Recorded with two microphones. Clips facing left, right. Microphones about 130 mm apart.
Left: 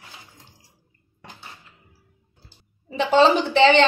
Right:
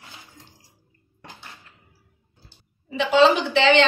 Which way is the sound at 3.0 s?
45° left (ahead or behind).